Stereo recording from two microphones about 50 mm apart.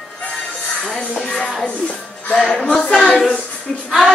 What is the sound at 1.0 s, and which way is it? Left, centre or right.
Music, left.